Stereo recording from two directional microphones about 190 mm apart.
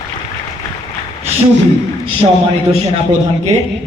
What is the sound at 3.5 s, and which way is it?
Speech, 35° right (ahead or behind).